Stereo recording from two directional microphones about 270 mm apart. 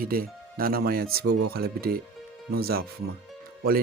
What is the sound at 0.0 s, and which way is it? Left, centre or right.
Speech, right.